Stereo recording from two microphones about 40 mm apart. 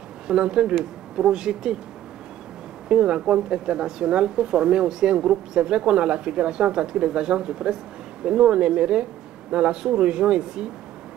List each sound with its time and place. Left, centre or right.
0.3 s speech: right
2.9 s speech: right